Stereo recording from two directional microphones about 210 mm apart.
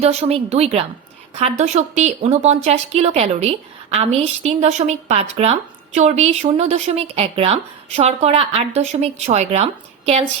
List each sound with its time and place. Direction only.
0.0 s a woman's voice: 30° right (ahead or behind)